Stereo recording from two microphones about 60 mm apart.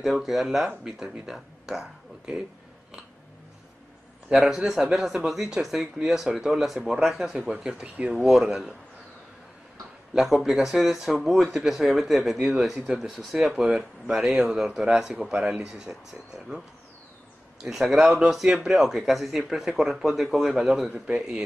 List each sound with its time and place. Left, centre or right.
0.0 s speech: centre
4.3 s speech: centre
7.4 s speech: centre
8.2 s speech: centre
10.1 s speech: centre
17.6 s speech: centre